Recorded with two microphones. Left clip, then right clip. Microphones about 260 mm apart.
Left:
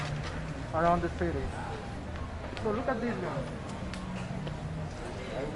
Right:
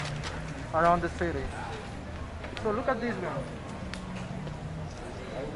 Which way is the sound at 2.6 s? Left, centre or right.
Centre.